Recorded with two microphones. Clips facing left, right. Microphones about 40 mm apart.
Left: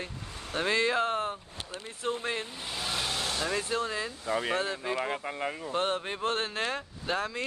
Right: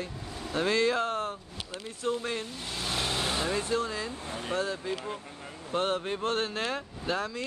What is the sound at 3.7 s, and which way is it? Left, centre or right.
Speech, centre.